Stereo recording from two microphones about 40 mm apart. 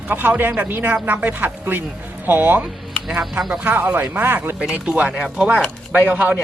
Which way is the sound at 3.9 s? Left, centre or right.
Right.